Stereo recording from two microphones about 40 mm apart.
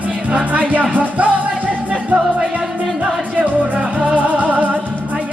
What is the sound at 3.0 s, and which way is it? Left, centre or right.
Music, right.